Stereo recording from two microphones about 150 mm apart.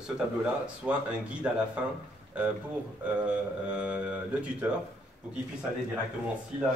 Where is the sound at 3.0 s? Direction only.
10° right (ahead or behind).